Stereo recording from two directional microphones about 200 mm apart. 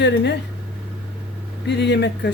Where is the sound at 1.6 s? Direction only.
60° left (ahead or behind).